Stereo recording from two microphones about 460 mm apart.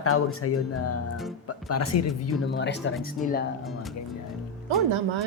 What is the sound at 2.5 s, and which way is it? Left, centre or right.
Speech, left.